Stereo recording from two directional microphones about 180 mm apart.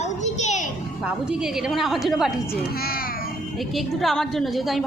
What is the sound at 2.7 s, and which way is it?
Music, 55° left (ahead or behind).